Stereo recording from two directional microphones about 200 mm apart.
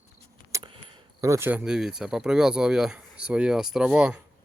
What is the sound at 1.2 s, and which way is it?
Speech, 15° right (ahead or behind).